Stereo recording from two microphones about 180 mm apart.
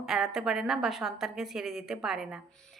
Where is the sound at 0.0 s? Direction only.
Centre (ahead or behind).